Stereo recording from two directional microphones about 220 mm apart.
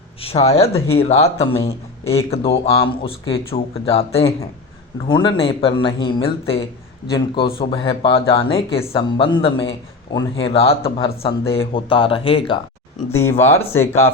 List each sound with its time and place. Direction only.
0.2 s a man's voice: 25° left (ahead or behind)
13.1 s speech: 10° left (ahead or behind)